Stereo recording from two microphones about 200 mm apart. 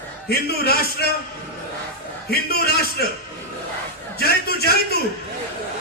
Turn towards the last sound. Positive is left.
turn(degrees=50)  # may be behind; listen again after turning